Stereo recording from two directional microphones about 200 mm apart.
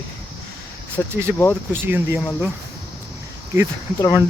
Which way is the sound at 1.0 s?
10° left (ahead or behind).